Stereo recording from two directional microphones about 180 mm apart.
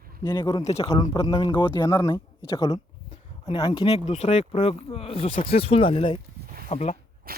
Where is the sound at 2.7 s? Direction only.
35° left (ahead or behind).